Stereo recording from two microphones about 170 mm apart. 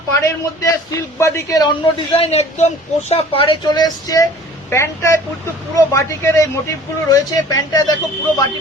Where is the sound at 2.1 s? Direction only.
40° left (ahead or behind); by 7.9 s 20° left (ahead or behind).